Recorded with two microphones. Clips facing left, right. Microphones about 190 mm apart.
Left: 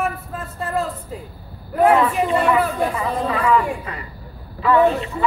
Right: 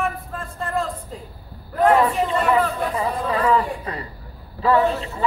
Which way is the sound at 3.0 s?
30° right (ahead or behind).